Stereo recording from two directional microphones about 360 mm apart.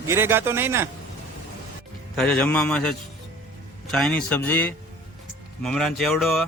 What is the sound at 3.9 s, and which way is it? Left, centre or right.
Speech, centre.